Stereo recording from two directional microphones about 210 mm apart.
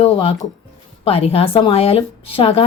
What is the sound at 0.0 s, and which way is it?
Speech, 25° left (ahead or behind).